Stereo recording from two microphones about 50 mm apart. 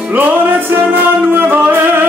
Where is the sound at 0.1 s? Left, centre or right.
Right.